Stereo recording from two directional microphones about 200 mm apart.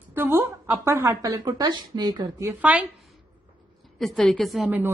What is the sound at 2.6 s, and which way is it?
Speech, 5° right (ahead or behind).